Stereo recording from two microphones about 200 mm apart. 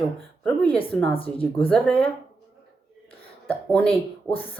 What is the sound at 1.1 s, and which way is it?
Speech, 25° left (ahead or behind).